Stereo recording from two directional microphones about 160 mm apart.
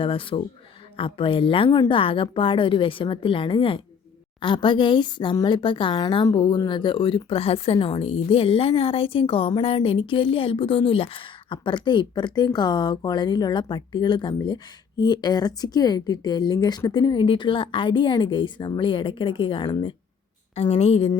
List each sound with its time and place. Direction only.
0.0 s a woman's voice: 35° left (ahead or behind)